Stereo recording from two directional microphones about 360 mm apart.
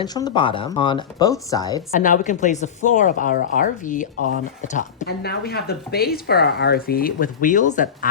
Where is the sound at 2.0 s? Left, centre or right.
Left.